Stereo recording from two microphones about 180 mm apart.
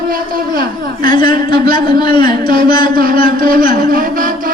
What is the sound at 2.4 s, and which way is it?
A man's voice, 55° right (ahead or behind).